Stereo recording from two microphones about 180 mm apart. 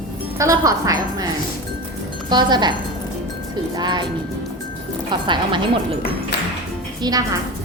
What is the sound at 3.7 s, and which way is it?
Speech, 25° right (ahead or behind).